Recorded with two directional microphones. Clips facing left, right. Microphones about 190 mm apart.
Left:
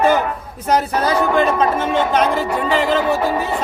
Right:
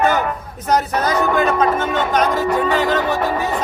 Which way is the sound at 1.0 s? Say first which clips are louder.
Left 1 dB; 30° left (ahead or behind).